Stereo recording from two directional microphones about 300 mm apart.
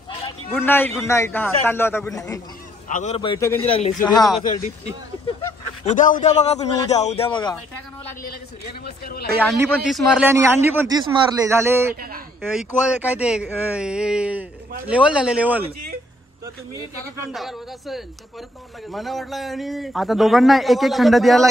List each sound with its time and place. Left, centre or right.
0.5 s a man's voice: centre
2.9 s a man's voice: left; by 4.2 s centre
5.9 s a man's voice: left
8.8 s speech: left
9.5 s a man's voice: centre
17.3 s a man's voice: centre